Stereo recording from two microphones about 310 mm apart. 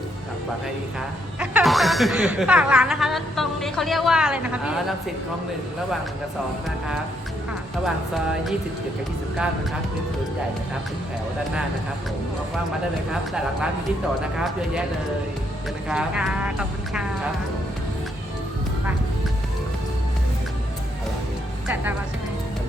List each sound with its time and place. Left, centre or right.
1.4 s speech: centre
13.1 s speech: centre
15.9 s speech: centre